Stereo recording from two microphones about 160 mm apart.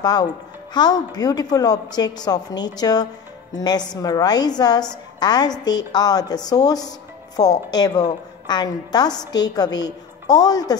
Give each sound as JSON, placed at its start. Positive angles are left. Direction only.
{"t": 0.0, "sound": "a woman's voice", "side_deg": 25}